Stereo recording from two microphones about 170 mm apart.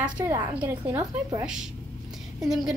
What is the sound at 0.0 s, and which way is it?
A woman's voice, 15° right (ahead or behind).